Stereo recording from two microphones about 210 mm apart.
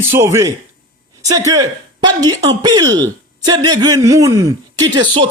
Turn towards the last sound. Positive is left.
turn(degrees=-20)  # may be behind; listen again after turning